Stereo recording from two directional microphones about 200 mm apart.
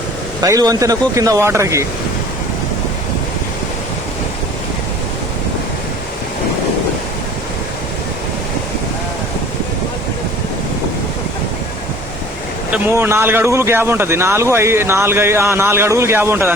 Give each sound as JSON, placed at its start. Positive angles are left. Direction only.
{"t": 0.4, "sound": "a man's voice", "side_deg": -15}
{"t": 12.7, "sound": "a man's voice", "side_deg": -10}